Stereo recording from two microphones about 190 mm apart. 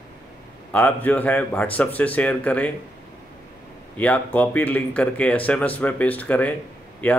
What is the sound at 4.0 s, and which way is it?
Speech, 10° left (ahead or behind).